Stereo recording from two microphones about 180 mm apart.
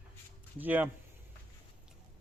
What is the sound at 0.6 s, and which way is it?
Speech, 10° right (ahead or behind).